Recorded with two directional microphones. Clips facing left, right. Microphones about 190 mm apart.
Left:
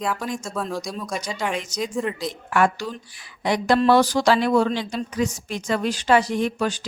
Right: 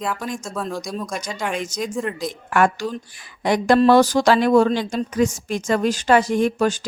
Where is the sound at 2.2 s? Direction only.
50° right (ahead or behind).